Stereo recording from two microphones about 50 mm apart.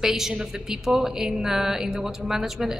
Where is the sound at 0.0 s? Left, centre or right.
Centre.